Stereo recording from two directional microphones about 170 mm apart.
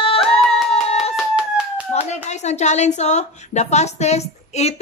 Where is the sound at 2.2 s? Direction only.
40° left (ahead or behind).